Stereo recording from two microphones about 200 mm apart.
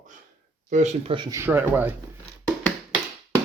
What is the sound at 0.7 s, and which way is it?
Speech, 35° right (ahead or behind).